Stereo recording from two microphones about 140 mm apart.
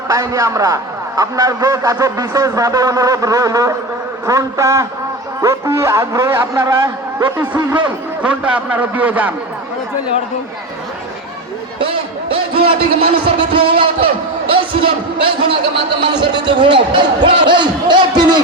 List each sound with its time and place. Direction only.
0.1 s a man's voice: 25° right (ahead or behind)
8.2 s a man's voice: 10° right (ahead or behind)
12.3 s a man's voice: 40° right (ahead or behind)